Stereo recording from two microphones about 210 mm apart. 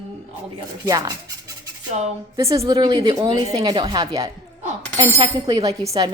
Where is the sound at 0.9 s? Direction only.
15° right (ahead or behind).